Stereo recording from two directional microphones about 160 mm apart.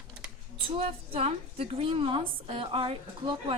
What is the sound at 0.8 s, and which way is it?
A woman's voice, 40° right (ahead or behind).